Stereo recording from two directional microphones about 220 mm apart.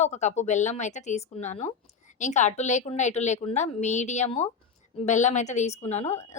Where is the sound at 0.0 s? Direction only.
30° left (ahead or behind).